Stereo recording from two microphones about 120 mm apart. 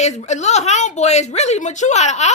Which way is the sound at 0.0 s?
70° left (ahead or behind).